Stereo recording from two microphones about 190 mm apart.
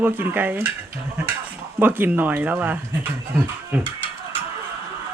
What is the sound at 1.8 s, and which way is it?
Speech, 10° right (ahead or behind).